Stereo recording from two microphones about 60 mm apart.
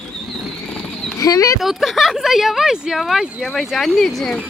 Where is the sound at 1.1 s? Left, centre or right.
Left.